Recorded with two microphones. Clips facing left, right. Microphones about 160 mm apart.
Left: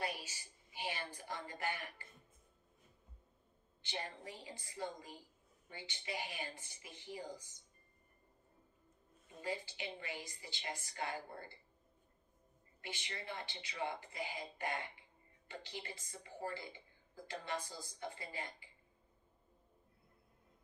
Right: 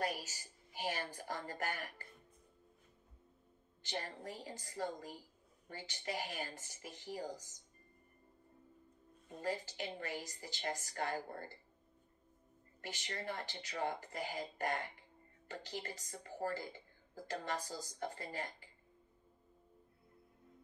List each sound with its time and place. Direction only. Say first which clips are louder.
0.0 s speech: right 3 dB; 40° right (ahead or behind)
3.8 s speech: right 2 dB; 45° right (ahead or behind)
9.4 s speech: right 3 dB; 45° right (ahead or behind)
12.8 s speech: right 4 dB; 45° right (ahead or behind)